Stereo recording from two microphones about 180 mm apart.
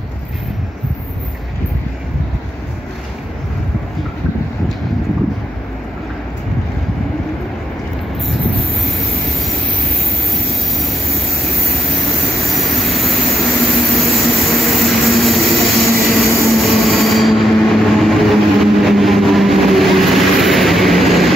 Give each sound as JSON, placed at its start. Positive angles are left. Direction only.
{"t": 10.3, "sound": "vehicle", "side_deg": 0}